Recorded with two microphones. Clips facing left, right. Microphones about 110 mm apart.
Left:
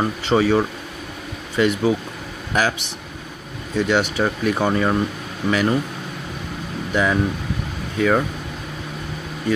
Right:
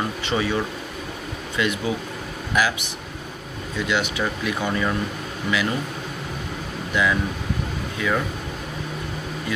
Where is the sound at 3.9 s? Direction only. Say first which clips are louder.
Left 4 dB; 40° left (ahead or behind).